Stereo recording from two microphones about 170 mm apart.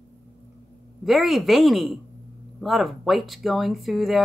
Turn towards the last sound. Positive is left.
turn(degrees=0)  # may be behind; listen again after turning